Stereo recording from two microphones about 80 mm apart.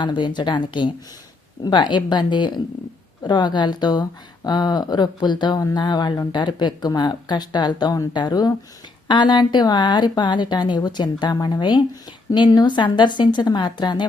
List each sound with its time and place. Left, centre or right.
0.0 s speech: left
1.6 s speech: left
9.0 s speech: left